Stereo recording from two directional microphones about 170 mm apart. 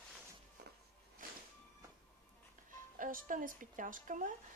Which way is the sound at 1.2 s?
55° right (ahead or behind).